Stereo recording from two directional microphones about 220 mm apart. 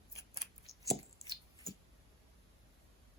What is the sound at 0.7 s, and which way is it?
Chopping, 15° right (ahead or behind).